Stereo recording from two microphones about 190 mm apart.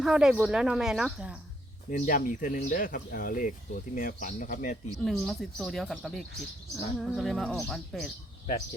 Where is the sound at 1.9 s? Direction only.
45° left (ahead or behind).